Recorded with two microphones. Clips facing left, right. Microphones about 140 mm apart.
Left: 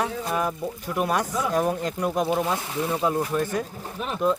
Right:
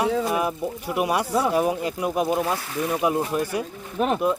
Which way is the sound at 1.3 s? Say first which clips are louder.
Right 4 dB; 35° right (ahead or behind).